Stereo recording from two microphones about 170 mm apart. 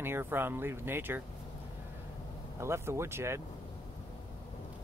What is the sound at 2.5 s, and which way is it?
Speech, 15° right (ahead or behind).